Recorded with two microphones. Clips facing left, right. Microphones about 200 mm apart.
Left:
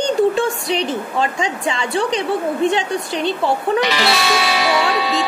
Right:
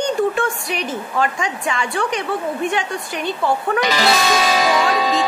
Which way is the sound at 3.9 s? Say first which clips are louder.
Right 1 dB; 40° right (ahead or behind).